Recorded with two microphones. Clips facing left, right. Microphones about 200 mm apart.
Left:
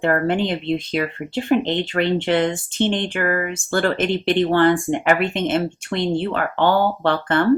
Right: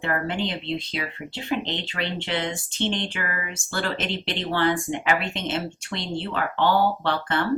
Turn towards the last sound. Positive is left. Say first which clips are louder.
# left 6 dB
turn(degrees=50)  # may be behind; listen again after turning